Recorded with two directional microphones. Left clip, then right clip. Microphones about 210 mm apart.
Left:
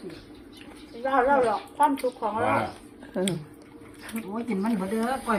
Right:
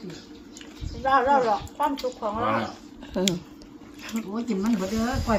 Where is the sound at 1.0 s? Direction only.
10° left (ahead or behind).